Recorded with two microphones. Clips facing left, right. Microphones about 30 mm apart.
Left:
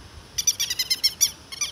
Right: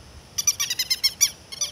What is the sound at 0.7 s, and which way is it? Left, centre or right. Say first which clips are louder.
Owl: even; centre.